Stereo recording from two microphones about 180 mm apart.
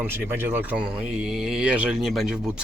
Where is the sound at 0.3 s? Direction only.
10° right (ahead or behind).